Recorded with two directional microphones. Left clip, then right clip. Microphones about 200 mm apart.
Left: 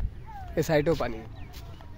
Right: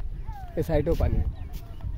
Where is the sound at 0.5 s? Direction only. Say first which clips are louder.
Left 2 dB; 10° left (ahead or behind).